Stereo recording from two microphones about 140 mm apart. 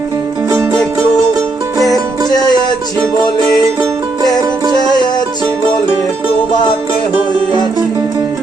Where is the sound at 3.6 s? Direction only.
25° right (ahead or behind).